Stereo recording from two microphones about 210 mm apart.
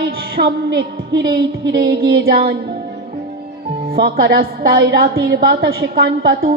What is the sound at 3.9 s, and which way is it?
Speech, 45° right (ahead or behind).